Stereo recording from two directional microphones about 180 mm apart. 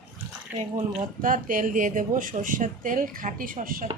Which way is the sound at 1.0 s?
50° right (ahead or behind).